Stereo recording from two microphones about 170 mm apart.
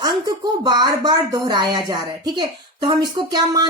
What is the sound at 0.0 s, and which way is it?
Speech, 25° right (ahead or behind).